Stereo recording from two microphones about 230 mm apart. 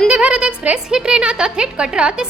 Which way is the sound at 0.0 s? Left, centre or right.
Centre.